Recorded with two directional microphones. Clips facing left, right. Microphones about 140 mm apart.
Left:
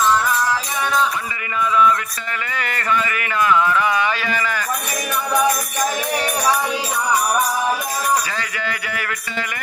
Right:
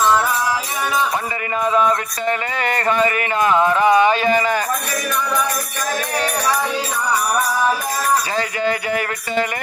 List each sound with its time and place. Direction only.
1.6 s music: 40° right (ahead or behind)
5.3 s music: 15° left (ahead or behind)
8.4 s music: 35° right (ahead or behind)